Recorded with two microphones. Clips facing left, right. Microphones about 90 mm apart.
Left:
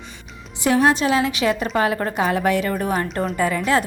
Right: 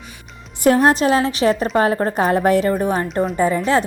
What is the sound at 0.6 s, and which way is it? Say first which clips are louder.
A woman's voice: right 3 dB; 40° right (ahead or behind).